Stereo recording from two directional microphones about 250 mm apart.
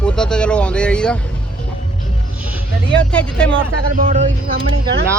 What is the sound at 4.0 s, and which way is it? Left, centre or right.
Speech, right.